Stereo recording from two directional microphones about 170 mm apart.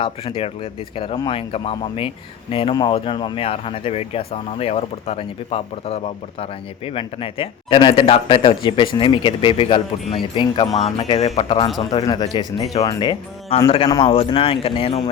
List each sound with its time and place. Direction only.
0.0 s speech: 30° left (ahead or behind)